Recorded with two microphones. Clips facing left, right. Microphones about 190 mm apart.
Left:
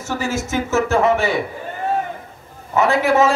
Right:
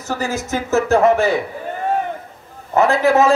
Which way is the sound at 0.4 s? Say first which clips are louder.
Right 1 dB; 35° right (ahead or behind).